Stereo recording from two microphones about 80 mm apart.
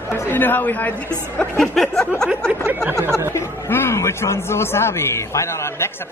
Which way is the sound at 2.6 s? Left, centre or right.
Right.